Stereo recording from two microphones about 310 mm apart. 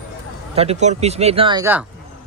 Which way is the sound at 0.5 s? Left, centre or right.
Centre.